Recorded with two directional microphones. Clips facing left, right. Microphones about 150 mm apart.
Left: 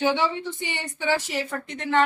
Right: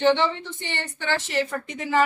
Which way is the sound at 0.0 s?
10° left (ahead or behind).